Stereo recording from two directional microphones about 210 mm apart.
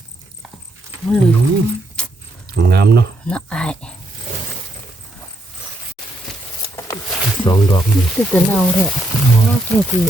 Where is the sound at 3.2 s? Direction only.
5° left (ahead or behind).